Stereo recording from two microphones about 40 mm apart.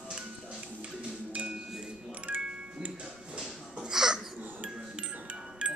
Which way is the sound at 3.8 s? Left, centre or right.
Centre.